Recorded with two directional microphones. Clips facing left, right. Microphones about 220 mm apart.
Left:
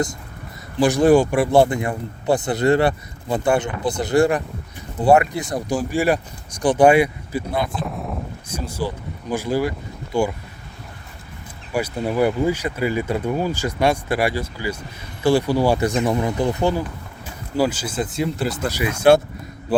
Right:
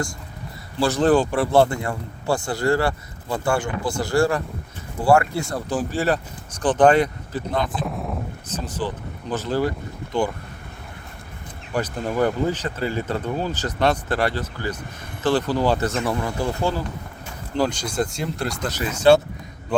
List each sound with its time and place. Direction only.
0.8 s speech: 15° left (ahead or behind)
7.7 s speech: centre (ahead or behind)
8.4 s speech: 10° left (ahead or behind)
11.7 s speech: 10° left (ahead or behind)
17.6 s speech: 5° left (ahead or behind)